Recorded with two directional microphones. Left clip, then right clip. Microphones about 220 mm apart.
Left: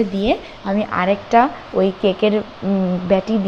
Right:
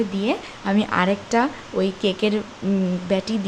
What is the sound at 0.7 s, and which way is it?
Speech, 15° right (ahead or behind).